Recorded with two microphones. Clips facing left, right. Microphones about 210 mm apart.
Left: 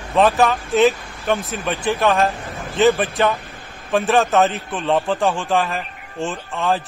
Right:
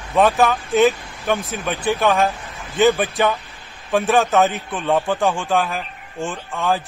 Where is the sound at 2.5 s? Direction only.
45° left (ahead or behind).